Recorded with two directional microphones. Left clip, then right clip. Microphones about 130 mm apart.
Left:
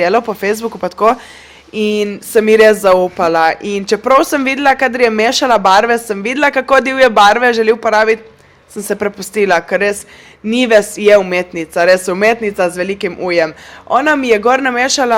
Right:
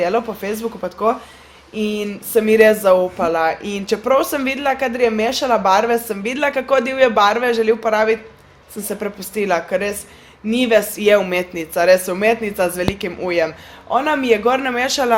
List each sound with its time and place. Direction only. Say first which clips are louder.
0.0 s a woman's voice: left 6 dB; 55° left (ahead or behind); by 15.1 s 40° left (ahead or behind)